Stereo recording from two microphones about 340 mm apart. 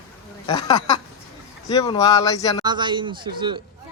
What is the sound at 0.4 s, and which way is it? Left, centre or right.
Speech, centre.